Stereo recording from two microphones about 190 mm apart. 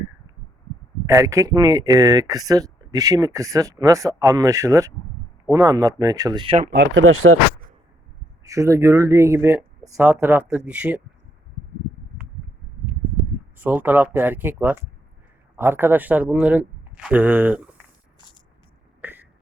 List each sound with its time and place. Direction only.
1.0 s speech: 15° right (ahead or behind)
6.7 s speech: 75° right (ahead or behind)
8.4 s speech: 15° right (ahead or behind)
13.6 s speech: 10° right (ahead or behind)
19.0 s throat clearing: 10° right (ahead or behind)